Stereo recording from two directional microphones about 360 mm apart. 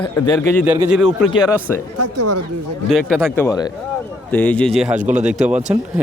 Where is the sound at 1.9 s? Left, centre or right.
Right.